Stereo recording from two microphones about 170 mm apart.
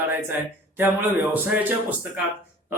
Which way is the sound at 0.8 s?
10° right (ahead or behind).